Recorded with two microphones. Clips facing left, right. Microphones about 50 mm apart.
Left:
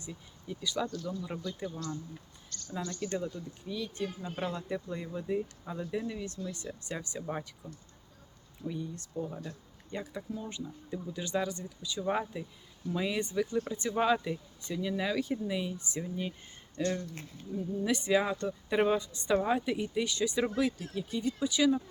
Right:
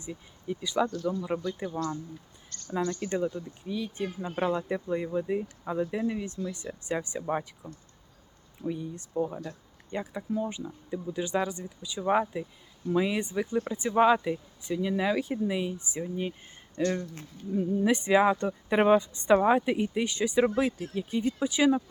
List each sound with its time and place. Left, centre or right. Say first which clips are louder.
0.0 s speech: right 6 dB; right
1.7 s speech: right 7 dB; right
2.5 s speech: right 8 dB; right
7.6 s speech: right 3 dB; centre